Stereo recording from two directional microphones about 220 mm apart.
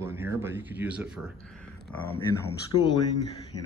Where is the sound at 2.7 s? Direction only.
20° left (ahead or behind).